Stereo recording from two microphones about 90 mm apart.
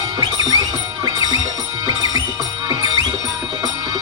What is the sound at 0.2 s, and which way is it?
Music, 45° right (ahead or behind).